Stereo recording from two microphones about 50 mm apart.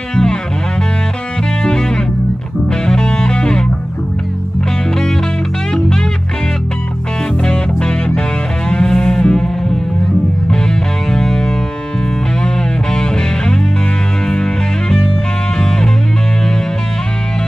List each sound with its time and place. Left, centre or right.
0.1 s music: centre
1.6 s music: centre
5.7 s music: centre
7.4 s music: centre
12.9 s music: centre